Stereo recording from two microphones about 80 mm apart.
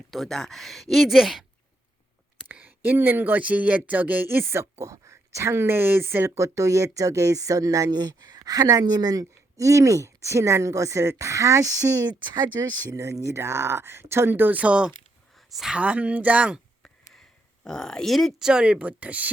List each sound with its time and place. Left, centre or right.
0.1 s speech: centre
2.5 s speech: right
7.9 s speech: right
12.2 s speech: right
12.9 s speech: right; by 16.6 s centre
16.8 s a sound: centre
18.4 s speech: centre